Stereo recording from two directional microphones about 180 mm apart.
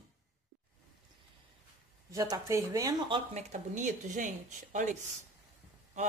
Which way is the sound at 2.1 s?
20° right (ahead or behind).